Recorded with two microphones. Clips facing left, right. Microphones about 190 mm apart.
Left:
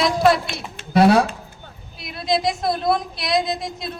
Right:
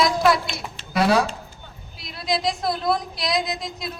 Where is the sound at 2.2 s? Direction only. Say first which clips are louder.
Left 3 dB; 25° left (ahead or behind).